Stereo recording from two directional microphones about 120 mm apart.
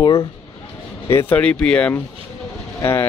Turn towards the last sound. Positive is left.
turn(degrees=20)  # may be behind; listen again after turning